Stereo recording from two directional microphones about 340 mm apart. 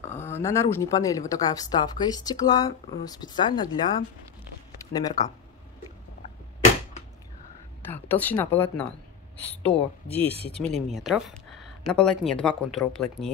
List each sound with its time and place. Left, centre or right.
0.0 s speech: centre
7.9 s speech: centre